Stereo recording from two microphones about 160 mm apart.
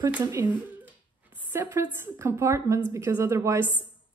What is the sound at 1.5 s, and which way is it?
A woman's voice, 15° right (ahead or behind).